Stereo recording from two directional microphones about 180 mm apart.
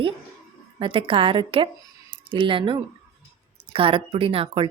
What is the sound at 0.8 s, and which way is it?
Speech, 30° right (ahead or behind).